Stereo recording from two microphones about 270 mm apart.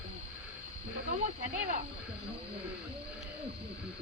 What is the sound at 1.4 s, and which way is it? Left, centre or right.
Speech, right.